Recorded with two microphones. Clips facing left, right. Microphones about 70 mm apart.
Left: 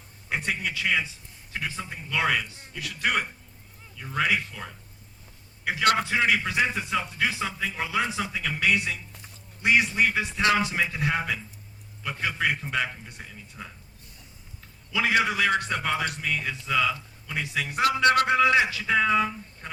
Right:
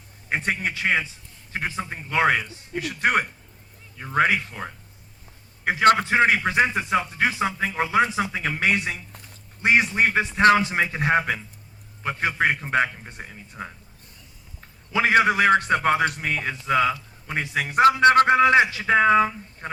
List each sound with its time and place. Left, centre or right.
0.3 s a man's voice: right